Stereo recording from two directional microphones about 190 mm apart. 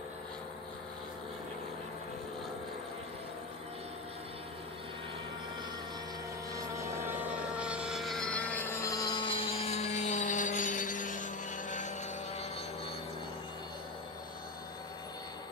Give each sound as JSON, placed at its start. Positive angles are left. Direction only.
{"t": 6.5, "sound": "helicopter", "side_deg": -15}